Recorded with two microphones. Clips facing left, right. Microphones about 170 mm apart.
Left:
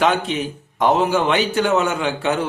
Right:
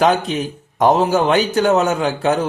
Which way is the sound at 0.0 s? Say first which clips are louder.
Right 3 dB; 40° right (ahead or behind).